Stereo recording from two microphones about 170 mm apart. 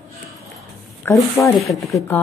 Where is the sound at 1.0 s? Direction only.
10° left (ahead or behind).